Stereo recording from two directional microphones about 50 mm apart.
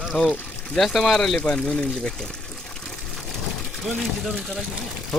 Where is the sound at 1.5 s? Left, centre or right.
Centre.